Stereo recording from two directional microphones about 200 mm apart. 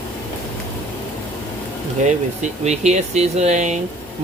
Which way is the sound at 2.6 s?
35° right (ahead or behind).